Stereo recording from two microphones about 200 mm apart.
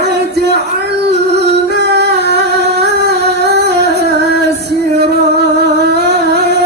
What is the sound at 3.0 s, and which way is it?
Music, 55° right (ahead or behind).